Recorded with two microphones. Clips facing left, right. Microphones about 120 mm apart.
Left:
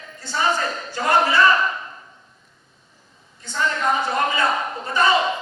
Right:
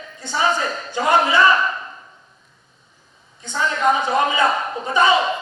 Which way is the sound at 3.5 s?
15° right (ahead or behind).